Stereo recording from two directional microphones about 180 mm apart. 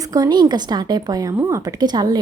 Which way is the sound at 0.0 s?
20° right (ahead or behind).